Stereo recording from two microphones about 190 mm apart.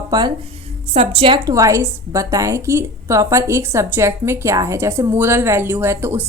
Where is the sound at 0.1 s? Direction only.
20° right (ahead or behind).